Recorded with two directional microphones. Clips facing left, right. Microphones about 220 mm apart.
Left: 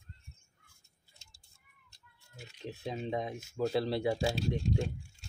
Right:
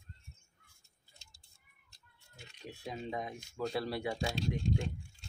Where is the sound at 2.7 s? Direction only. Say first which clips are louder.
Left 4 dB; 25° left (ahead or behind).